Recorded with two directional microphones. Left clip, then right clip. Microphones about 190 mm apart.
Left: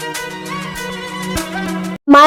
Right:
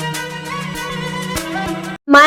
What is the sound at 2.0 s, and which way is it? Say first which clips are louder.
Music: left 1 dB; 45° left (ahead or behind).